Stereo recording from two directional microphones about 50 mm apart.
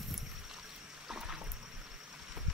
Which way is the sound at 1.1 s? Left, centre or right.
Centre.